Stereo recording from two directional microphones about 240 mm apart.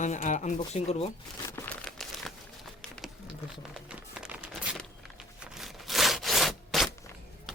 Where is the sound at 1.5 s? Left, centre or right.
Centre.